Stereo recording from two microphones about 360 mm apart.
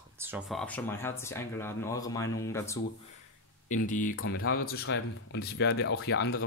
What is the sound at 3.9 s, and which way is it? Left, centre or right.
Speech, left.